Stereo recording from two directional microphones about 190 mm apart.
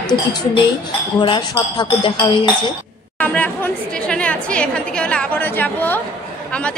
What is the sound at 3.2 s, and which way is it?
A woman's voice, 10° left (ahead or behind).